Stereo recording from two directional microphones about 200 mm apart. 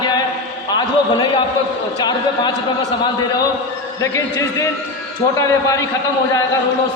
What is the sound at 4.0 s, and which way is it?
A man's voice, 15° left (ahead or behind).